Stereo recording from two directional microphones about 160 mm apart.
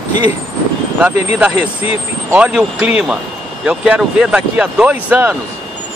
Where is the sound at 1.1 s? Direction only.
45° left (ahead or behind).